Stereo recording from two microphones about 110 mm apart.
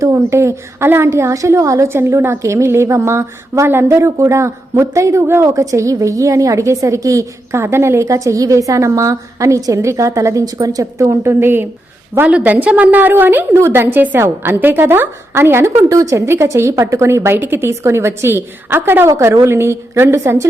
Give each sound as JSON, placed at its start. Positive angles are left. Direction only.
{"t": 0.0, "sound": "a woman's voice", "side_deg": -25}